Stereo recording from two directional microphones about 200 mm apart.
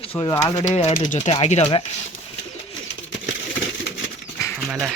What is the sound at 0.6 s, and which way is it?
Speech, 35° left (ahead or behind).